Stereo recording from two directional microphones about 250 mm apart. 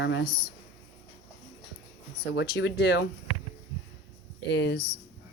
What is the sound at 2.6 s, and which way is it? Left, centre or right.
Speech, left.